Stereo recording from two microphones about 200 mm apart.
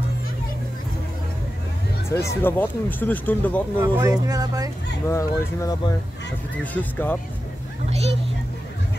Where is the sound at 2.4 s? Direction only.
10° left (ahead or behind).